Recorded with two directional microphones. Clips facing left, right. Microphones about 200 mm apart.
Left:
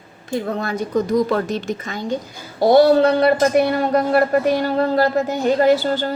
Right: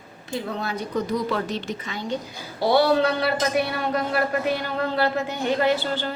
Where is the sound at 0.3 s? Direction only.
50° left (ahead or behind).